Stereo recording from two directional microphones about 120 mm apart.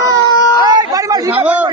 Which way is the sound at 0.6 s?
30° right (ahead or behind).